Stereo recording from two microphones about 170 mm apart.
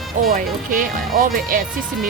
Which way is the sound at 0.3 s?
50° right (ahead or behind).